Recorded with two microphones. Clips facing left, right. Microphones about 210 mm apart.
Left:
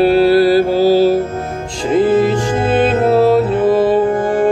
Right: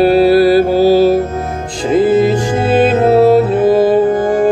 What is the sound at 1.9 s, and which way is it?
Music, 35° right (ahead or behind).